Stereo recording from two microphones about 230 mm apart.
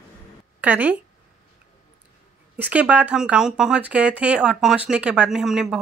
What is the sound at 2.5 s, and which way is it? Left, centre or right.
Speech, centre.